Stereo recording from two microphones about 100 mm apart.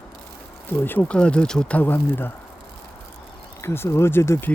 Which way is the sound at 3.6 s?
25° left (ahead or behind).